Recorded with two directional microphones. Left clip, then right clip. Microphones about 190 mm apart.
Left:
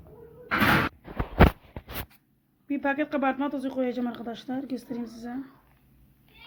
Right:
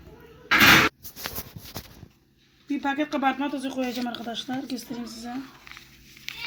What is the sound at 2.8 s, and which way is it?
Speech, 15° left (ahead or behind).